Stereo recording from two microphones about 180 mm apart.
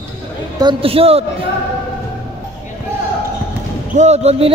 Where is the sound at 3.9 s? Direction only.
40° right (ahead or behind).